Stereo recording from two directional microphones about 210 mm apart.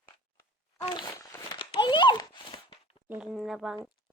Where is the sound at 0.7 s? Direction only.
25° left (ahead or behind).